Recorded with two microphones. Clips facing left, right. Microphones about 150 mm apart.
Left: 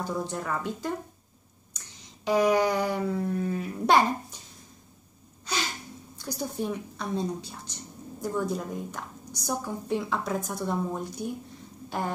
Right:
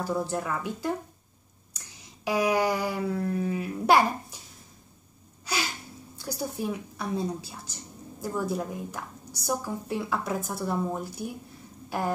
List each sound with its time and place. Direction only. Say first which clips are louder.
0.0 s a woman's voice: right 2 dB; 5° right (ahead or behind)
2.2 s a woman's voice: left 2 dB; 5° right (ahead or behind)
5.4 s a sound: right 1 dB; 10° right (ahead or behind)
6.2 s a woman's voice: even; 10° right (ahead or behind)